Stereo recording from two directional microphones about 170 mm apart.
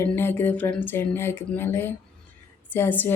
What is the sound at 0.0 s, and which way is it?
Speech, 15° left (ahead or behind).